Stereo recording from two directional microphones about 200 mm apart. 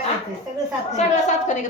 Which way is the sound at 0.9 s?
35° left (ahead or behind).